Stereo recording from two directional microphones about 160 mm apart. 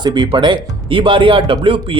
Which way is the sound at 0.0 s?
30° right (ahead or behind).